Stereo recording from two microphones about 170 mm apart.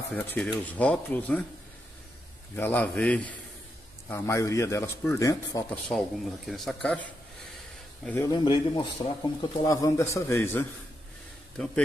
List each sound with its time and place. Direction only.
0.1 s speech: 5° left (ahead or behind)
2.5 s speech: 10° left (ahead or behind)
5.9 s speech: centre (ahead or behind)
8.0 s speech: 10° left (ahead or behind)
8.3 s a man's voice: 30° left (ahead or behind); by 11.8 s 5° left (ahead or behind)